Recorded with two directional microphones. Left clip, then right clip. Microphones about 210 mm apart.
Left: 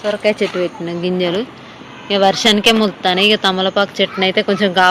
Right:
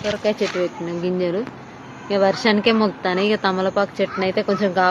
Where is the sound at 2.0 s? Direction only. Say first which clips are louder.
Left 5 dB; 15° left (ahead or behind).